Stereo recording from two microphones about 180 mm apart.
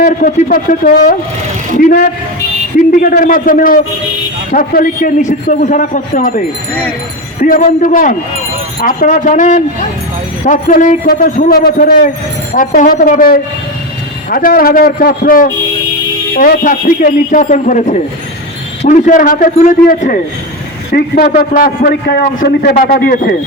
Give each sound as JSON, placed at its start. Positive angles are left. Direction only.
{"t": 0.0, "sound": "speech", "side_deg": 50}
{"t": 7.4, "sound": "a man's voice", "side_deg": 50}